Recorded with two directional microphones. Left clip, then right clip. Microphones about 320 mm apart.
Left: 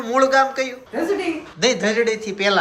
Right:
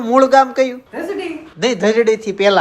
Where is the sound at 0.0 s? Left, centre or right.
Centre.